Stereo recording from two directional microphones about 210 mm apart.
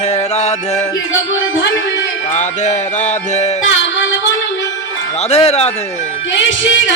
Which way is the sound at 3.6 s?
60° left (ahead or behind).